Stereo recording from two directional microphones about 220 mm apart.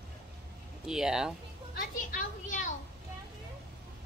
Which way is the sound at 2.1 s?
35° left (ahead or behind).